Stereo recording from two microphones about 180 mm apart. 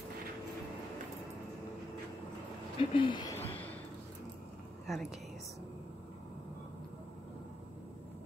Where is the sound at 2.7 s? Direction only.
30° left (ahead or behind).